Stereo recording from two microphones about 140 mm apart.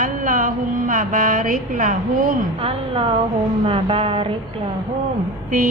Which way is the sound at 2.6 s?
40° right (ahead or behind).